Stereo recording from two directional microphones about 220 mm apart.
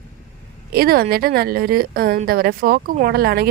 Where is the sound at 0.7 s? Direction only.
45° right (ahead or behind).